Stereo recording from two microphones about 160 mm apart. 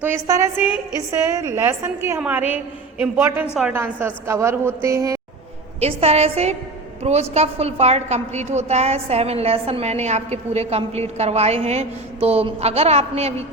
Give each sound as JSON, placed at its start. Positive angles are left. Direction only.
{"t": 0.0, "sound": "a woman's voice", "side_deg": -15}
{"t": 5.8, "sound": "a woman's voice", "side_deg": -40}